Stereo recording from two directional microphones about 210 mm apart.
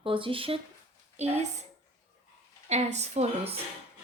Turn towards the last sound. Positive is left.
turn(degrees=-30)  # may be behind; listen again after turning